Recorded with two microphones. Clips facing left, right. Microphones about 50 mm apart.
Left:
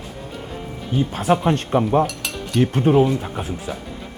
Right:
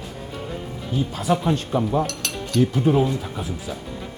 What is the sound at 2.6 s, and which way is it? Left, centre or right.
Speech, left.